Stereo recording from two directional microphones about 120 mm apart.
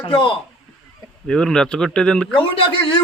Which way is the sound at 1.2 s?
5° left (ahead or behind).